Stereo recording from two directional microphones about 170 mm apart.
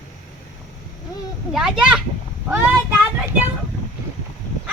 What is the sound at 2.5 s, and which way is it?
Child singing, 15° right (ahead or behind).